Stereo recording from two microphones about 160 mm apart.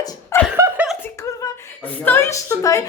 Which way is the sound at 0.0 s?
25° left (ahead or behind).